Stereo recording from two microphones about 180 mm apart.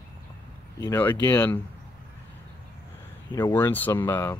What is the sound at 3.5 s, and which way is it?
Speech, 10° left (ahead or behind).